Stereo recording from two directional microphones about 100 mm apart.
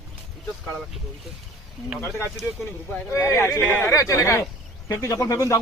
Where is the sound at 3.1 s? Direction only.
25° left (ahead or behind).